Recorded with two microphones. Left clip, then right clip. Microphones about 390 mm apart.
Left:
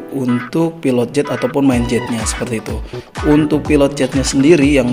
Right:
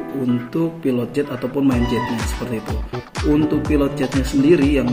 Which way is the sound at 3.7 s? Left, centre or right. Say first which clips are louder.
Left 6 dB; left.